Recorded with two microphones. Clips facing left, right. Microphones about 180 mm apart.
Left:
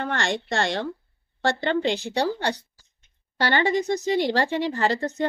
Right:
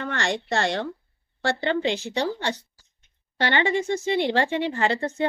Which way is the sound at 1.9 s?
35° left (ahead or behind).